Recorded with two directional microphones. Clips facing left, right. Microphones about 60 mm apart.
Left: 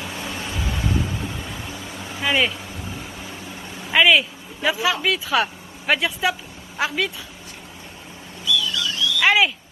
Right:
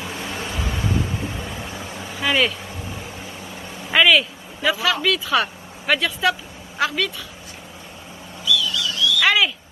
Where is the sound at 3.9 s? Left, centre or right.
Centre.